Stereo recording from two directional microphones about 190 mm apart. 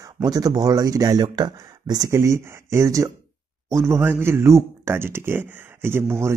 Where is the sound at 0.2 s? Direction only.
20° right (ahead or behind).